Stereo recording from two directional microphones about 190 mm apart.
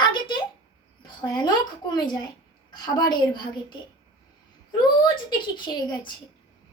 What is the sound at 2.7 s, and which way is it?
Speech, 20° left (ahead or behind).